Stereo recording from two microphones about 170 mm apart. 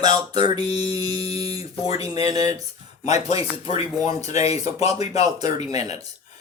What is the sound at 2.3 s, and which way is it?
Music, 20° right (ahead or behind).